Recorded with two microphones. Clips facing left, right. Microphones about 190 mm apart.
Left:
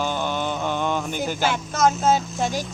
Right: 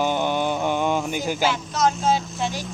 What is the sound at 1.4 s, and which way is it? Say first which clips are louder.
Speech: left 2 dB; 50° left (ahead or behind).